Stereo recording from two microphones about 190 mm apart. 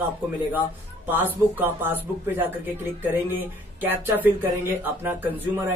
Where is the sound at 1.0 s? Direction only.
10° right (ahead or behind).